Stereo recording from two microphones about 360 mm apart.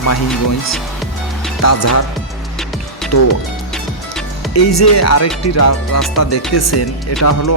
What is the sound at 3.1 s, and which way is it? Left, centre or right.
Speech, left.